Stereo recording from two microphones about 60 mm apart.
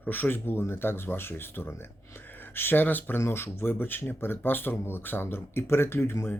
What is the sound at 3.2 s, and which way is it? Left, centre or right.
Speech, left.